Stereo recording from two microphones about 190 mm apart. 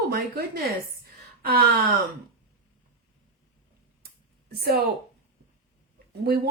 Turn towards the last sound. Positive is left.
turn(degrees=-55)  # may be behind; listen again after turning